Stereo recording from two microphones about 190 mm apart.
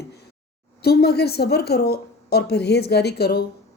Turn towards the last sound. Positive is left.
turn(degrees=55)  # may be behind; listen again after turning